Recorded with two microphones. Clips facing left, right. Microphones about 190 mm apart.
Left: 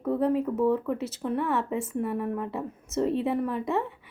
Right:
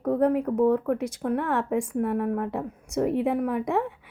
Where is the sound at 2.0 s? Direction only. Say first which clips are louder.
Right 4 dB; 55° right (ahead or behind).